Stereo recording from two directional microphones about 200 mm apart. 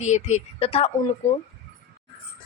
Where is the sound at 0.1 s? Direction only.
35° left (ahead or behind).